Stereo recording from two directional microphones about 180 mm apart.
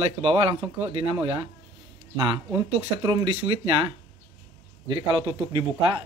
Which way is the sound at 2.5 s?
20° right (ahead or behind).